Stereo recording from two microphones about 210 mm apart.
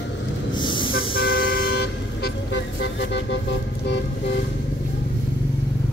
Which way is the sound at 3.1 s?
60° left (ahead or behind).